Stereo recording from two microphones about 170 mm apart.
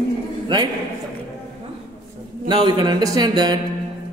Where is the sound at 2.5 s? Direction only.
25° right (ahead or behind).